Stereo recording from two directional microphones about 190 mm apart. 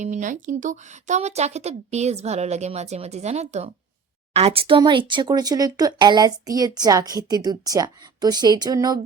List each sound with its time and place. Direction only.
0.0 s speech: 40° right (ahead or behind); by 9.0 s 20° right (ahead or behind)